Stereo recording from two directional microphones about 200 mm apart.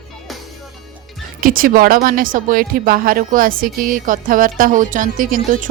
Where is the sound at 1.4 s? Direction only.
45° right (ahead or behind).